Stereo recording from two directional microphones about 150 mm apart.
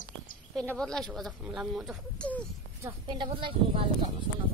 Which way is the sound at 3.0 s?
30° right (ahead or behind).